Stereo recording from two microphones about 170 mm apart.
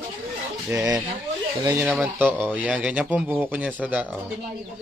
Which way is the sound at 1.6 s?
20° right (ahead or behind).